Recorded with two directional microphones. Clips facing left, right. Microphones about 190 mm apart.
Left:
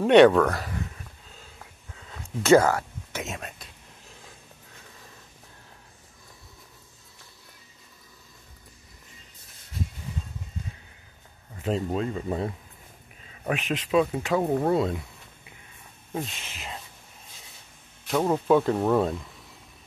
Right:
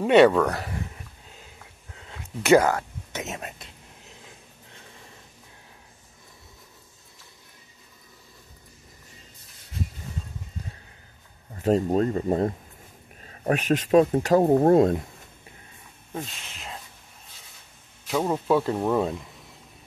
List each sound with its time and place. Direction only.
0.0 s speech: 5° right (ahead or behind)
2.4 s speech: 15° right (ahead or behind)
11.5 s speech: 40° right (ahead or behind)
16.1 s speech: centre (ahead or behind)
18.0 s speech: 5° right (ahead or behind)